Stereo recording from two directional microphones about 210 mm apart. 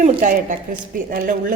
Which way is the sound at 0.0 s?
40° right (ahead or behind).